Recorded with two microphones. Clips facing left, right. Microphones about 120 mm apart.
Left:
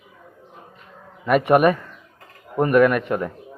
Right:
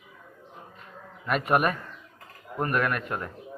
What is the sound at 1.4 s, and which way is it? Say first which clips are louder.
A man's voice: left 8 dB; 70° left (ahead or behind).